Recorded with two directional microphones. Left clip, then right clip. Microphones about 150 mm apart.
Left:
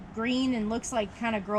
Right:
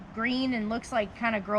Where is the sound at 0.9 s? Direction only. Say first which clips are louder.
Right 3 dB; 40° right (ahead or behind).